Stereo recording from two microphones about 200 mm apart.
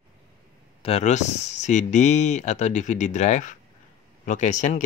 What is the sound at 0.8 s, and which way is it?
Speech, 30° left (ahead or behind).